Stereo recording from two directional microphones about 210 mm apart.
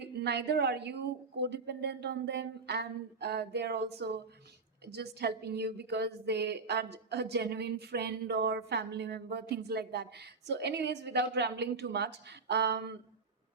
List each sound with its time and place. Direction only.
0.2 s a woman's voice: 55° right (ahead or behind)